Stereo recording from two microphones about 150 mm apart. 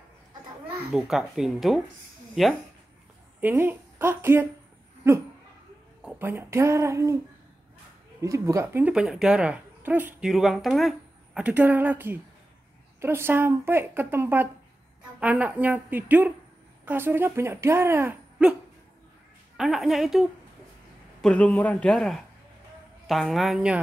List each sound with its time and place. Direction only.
0.9 s speech: centre (ahead or behind)
3.3 s speech: 15° right (ahead or behind)
8.2 s speech: 20° right (ahead or behind)
8.8 s speech: 5° right (ahead or behind)
10.3 s speech: centre (ahead or behind)
19.5 s a man's voice: centre (ahead or behind)